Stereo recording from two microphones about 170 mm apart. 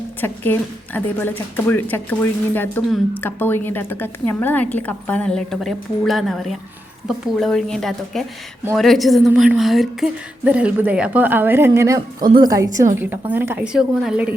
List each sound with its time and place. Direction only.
0.2 s a woman's voice: 10° left (ahead or behind); by 12.6 s 20° right (ahead or behind)
13.3 s a woman's voice: 10° right (ahead or behind)